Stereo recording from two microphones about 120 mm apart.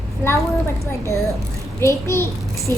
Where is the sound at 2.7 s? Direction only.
30° right (ahead or behind).